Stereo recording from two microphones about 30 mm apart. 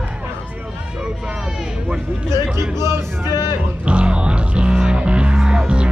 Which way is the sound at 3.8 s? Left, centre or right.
Right.